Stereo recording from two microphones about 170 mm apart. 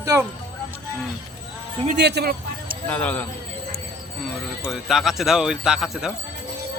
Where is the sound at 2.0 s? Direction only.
75° right (ahead or behind).